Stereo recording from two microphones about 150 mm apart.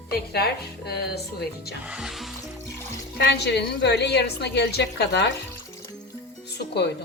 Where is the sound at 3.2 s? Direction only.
90° left.